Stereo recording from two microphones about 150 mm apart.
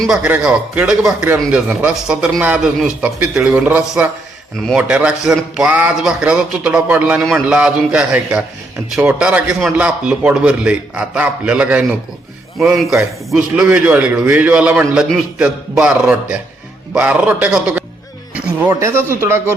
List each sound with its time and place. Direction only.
0.0 s a man's voice: 5° right (ahead or behind)
18.3 s music: 10° right (ahead or behind)
18.7 s a man's voice: 20° right (ahead or behind)